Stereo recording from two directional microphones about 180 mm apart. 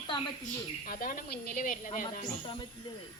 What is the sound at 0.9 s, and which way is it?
A woman's voice, 50° left (ahead or behind).